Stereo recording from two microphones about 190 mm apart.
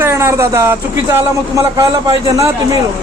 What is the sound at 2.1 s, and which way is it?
Speech, 20° right (ahead or behind).